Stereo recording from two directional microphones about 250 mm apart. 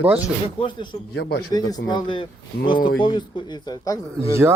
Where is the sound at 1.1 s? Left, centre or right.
Left.